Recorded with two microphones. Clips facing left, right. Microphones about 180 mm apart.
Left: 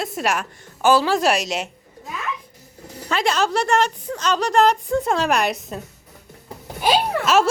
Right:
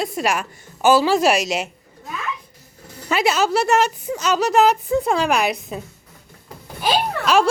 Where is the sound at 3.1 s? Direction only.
5° right (ahead or behind).